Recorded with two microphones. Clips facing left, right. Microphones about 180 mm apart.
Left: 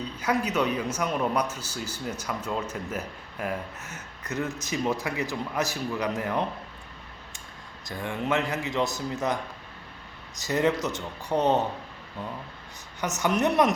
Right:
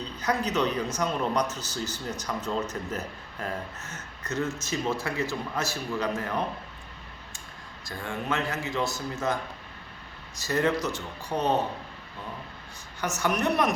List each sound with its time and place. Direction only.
0.2 s speech: 10° left (ahead or behind)
7.9 s a man's voice: 20° left (ahead or behind)
13.0 s a man's voice: 20° left (ahead or behind)